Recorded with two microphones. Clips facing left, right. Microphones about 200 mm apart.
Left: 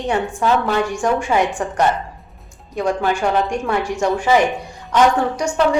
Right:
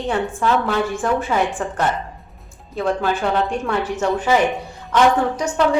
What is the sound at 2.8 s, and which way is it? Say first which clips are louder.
A woman's voice: left 1 dB; 15° left (ahead or behind).